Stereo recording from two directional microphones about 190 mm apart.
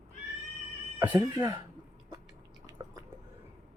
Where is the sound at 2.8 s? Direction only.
20° right (ahead or behind).